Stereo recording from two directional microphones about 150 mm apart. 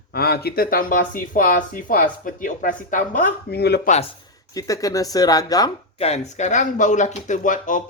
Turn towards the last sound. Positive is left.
turn(degrees=60)  # may be behind; listen again after turning